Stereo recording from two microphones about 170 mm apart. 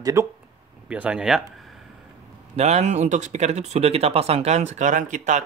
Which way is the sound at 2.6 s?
40° right (ahead or behind).